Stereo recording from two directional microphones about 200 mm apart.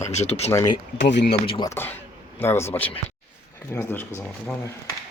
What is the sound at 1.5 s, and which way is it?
Speech, 20° left (ahead or behind).